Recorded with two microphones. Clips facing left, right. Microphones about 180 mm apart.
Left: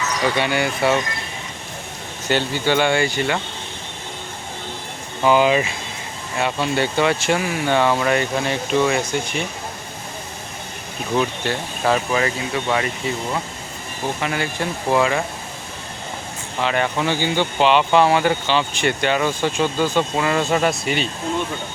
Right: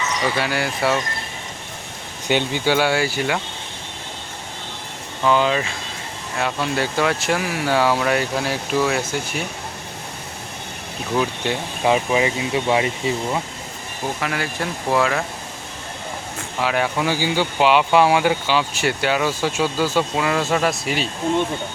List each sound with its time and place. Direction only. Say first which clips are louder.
0.0 s speech: left 2 dB; centre (ahead or behind)
2.2 s speech: even; 15° right (ahead or behind)
5.2 s speech: left 3 dB; 10° left (ahead or behind)
6.3 s speech: left 2 dB; centre (ahead or behind)
11.4 s speech: right 1 dB; 15° right (ahead or behind)
14.2 s speech: left 1 dB; centre (ahead or behind)
16.6 s speech: even; 5° right (ahead or behind)